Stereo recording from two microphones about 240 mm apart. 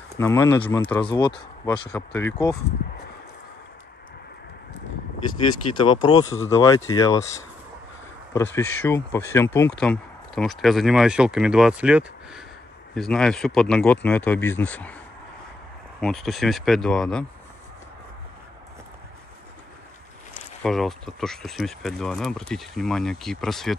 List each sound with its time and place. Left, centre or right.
0.2 s speech: centre
5.4 s speech: centre
8.3 s speech: centre
16.0 s speech: centre
20.6 s speech: centre